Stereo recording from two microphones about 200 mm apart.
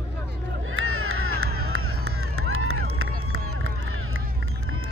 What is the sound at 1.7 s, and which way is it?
Run, 90° right.